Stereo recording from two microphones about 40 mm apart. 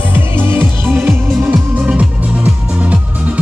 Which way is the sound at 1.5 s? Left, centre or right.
Right.